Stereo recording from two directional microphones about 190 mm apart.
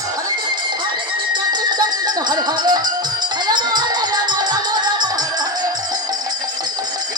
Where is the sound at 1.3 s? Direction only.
20° right (ahead or behind).